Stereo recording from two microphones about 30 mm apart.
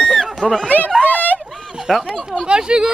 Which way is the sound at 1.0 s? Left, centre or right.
Left.